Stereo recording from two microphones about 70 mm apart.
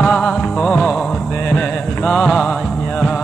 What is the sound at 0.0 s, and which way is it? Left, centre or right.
Music, centre.